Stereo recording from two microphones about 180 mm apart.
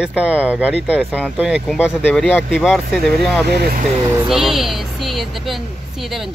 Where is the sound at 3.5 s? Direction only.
65° right (ahead or behind).